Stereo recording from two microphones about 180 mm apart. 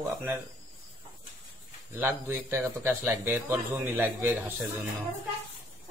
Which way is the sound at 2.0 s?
15° right (ahead or behind).